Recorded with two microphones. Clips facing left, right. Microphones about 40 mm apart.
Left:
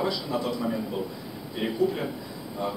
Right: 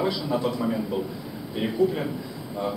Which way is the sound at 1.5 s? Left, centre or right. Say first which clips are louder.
Right 2 dB; centre.